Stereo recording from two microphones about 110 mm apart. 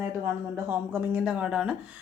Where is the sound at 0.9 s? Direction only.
10° right (ahead or behind).